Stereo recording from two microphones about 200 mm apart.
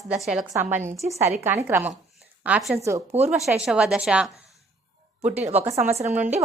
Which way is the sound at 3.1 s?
30° right (ahead or behind).